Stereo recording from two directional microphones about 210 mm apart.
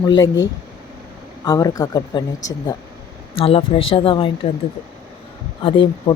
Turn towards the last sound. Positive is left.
turn(degrees=25)  # may be behind; listen again after turning